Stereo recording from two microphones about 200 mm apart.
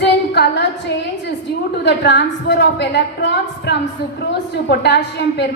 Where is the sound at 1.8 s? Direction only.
60° left (ahead or behind).